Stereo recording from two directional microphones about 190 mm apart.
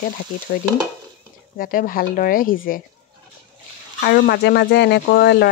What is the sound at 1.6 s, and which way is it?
Frying, 50° left (ahead or behind).